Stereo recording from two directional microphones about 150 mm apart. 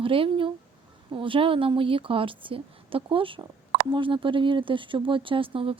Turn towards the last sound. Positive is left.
turn(degrees=-35)  # may be behind; listen again after turning